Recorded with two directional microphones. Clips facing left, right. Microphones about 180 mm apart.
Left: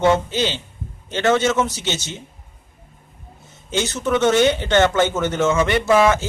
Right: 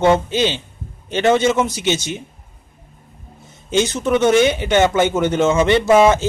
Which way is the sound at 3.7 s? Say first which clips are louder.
Right 4 dB; 15° right (ahead or behind).